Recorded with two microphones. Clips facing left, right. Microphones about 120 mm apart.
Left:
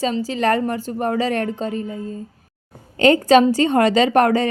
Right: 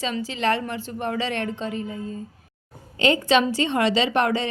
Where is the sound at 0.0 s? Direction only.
40° left (ahead or behind).